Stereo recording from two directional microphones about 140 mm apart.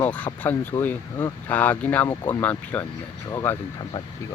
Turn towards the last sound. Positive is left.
turn(degrees=20)  # may be behind; listen again after turning